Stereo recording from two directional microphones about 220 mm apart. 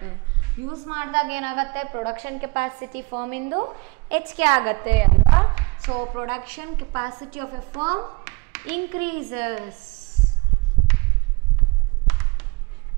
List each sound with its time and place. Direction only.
0.7 s a woman's voice: 15° right (ahead or behind)
3.5 s a woman's voice: 25° right (ahead or behind)
3.8 s a woman's voice: 10° right (ahead or behind)
12.1 s basketball bounce: 10° right (ahead or behind)